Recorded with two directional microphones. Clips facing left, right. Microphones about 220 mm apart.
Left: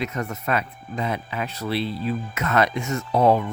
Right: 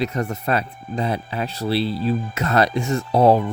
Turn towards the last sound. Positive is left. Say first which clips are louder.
# right 3 dB
turn(degrees=-35)  # may be behind; listen again after turning